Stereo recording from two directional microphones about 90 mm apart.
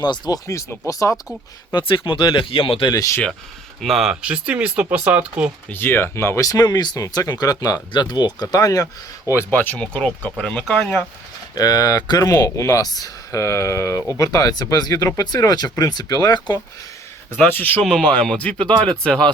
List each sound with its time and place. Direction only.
0.0 s speech: 55° left (ahead or behind)
0.4 s speech: 35° left (ahead or behind)
1.7 s speech: 70° left (ahead or behind)
2.9 s speech: 40° left (ahead or behind)
3.8 s speech: centre (ahead or behind)
4.1 s speech: 10° right (ahead or behind)
5.6 s speech: 25° left (ahead or behind); by 8.9 s 40° left (ahead or behind)
9.3 s speech: 25° left (ahead or behind); by 10.8 s 10° left (ahead or behind)
11.5 s speech: 45° left (ahead or behind)
17.5 s speech: 20° left (ahead or behind)